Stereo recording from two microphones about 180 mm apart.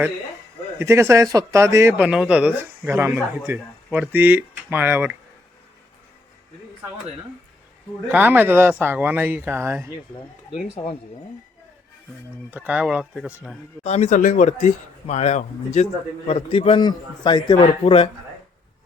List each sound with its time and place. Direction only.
0.8 s speech: 15° right (ahead or behind)
2.0 s speech: 5° right (ahead or behind)
8.1 s speech: 10° right (ahead or behind)
12.5 s speech: 10° right (ahead or behind)
13.8 s speech: 40° left (ahead or behind)